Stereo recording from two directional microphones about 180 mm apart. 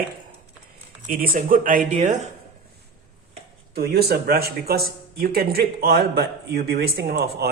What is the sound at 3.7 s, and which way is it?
Speech, 60° right (ahead or behind).